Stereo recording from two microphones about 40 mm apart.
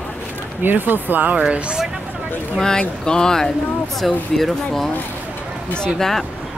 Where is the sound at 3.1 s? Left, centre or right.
Centre.